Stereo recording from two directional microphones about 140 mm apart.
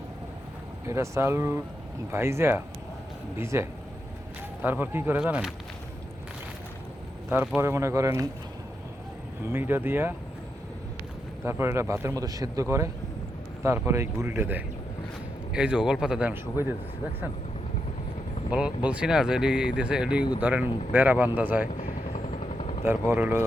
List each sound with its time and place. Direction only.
0.9 s speech: 20° right (ahead or behind)
7.3 s speech: 15° right (ahead or behind)
9.4 s speech: 15° right (ahead or behind)
11.4 s speech: 15° right (ahead or behind)
18.5 s speech: 10° right (ahead or behind)
21.7 s vehicle: 60° left (ahead or behind)
22.1 s vehicle: 50° left (ahead or behind)
22.8 s speech: 15° right (ahead or behind)